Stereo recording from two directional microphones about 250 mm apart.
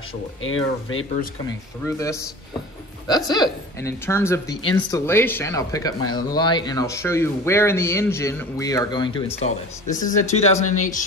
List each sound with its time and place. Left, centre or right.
0.4 s speech: left
1.9 s speech: centre